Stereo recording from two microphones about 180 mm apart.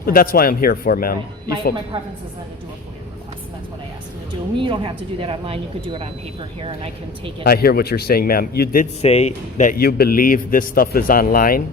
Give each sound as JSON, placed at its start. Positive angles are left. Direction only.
{"t": 0.0, "sound": "a man's voice", "side_deg": 55}
{"t": 4.5, "sound": "speech", "side_deg": -25}
{"t": 7.4, "sound": "a man's voice", "side_deg": 60}
{"t": 9.0, "sound": "a man's voice", "side_deg": 35}